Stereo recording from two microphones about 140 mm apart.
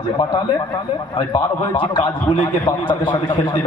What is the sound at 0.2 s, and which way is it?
A man's voice, 35° left (ahead or behind).